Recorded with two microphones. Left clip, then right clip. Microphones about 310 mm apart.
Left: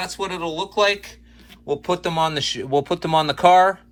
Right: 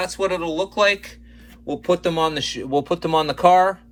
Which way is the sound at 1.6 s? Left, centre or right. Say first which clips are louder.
Right 2 dB; centre.